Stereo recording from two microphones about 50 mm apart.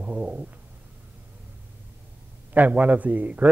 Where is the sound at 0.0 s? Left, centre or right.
Right.